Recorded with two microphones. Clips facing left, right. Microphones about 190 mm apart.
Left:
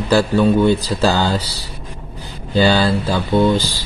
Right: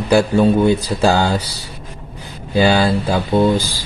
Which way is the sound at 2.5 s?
15° right (ahead or behind).